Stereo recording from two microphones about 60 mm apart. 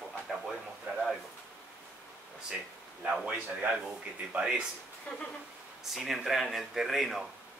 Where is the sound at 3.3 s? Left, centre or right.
Right.